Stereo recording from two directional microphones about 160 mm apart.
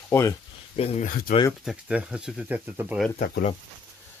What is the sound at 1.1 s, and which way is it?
Speech, 60° left (ahead or behind).